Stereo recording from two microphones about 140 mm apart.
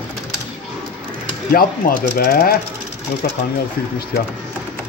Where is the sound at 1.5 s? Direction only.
90° left.